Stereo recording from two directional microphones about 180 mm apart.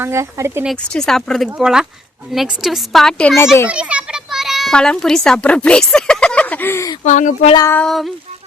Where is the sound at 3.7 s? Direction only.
5° right (ahead or behind); by 7.0 s 15° left (ahead or behind).